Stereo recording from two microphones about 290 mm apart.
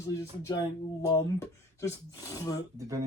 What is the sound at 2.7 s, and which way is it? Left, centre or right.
Speech, centre.